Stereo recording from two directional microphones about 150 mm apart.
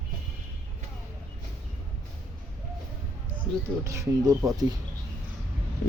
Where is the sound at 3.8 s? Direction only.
20° right (ahead or behind).